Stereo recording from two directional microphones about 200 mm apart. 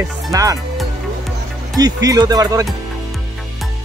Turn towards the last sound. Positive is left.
turn(degrees=-15)  # may be behind; listen again after turning